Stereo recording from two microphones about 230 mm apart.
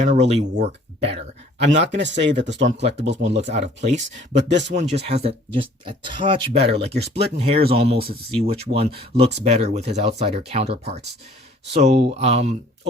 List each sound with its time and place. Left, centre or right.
0.0 s speech: right
1.8 s speech: right
3.3 s speech: right
4.4 s speech: right
4.8 s speech: right
6.8 s speech: right
7.3 s speech: right
7.9 s speech: right
8.3 s speech: right